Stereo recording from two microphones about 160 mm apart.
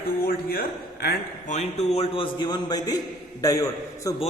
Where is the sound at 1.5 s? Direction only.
45° left (ahead or behind); by 4.1 s 20° left (ahead or behind).